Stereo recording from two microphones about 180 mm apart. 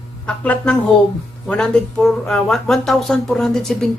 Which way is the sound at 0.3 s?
5° left (ahead or behind).